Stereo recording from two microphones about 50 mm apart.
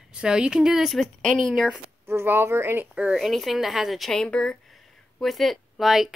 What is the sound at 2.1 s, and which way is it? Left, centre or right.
Speech, right.